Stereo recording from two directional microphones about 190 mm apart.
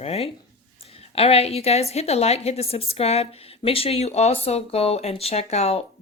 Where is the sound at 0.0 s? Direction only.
35° left (ahead or behind).